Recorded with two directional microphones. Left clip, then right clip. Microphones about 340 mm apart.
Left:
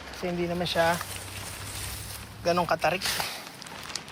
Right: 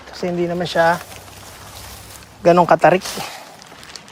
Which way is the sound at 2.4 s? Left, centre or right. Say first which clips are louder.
Right 14 dB; right.